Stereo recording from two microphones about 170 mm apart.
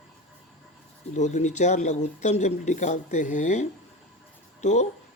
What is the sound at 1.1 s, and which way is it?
Speech, 45° left (ahead or behind).